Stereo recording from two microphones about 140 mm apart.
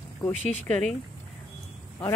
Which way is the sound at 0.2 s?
10° left (ahead or behind).